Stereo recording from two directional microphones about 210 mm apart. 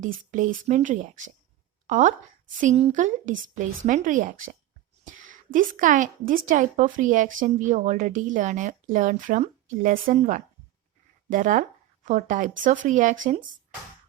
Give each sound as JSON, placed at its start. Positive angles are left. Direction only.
{"t": 0.3, "sound": "speech", "side_deg": -40}
{"t": 5.5, "sound": "speech", "side_deg": -40}